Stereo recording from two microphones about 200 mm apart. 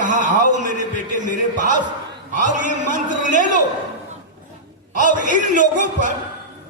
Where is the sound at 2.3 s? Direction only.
40° right (ahead or behind).